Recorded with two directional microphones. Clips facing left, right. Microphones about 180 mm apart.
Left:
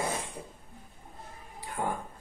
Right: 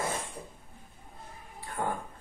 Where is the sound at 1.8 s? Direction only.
15° left (ahead or behind).